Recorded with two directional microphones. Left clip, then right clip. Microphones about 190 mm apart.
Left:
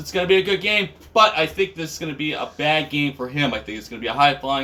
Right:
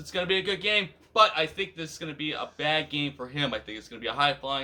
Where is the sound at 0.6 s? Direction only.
50° right (ahead or behind).